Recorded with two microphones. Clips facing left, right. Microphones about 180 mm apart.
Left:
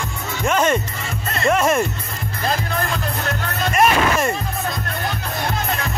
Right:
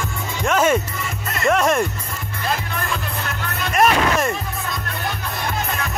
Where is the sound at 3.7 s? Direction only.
Centre (ahead or behind).